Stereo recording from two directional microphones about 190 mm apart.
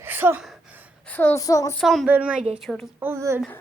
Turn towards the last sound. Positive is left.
turn(degrees=-15)  # may be behind; listen again after turning